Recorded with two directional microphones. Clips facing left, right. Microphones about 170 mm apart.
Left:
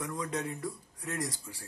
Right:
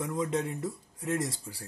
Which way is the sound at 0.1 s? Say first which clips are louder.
Right 5 dB; 25° right (ahead or behind).